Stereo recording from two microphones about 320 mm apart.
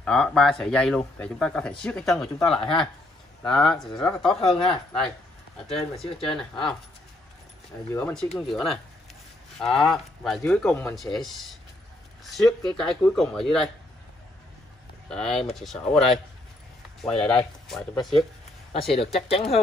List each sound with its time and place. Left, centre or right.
0.0 s speech: centre
4.3 s speech: centre
4.6 s speech: centre
5.9 s speech: centre
7.9 s speech: centre
9.8 s speech: centre
15.0 s speech: centre
17.0 s speech: centre
18.7 s speech: centre